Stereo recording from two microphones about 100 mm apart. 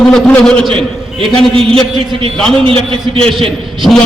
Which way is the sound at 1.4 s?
5° left (ahead or behind).